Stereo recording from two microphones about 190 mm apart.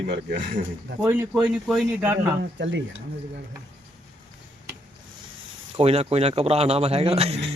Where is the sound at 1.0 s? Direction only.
10° right (ahead or behind).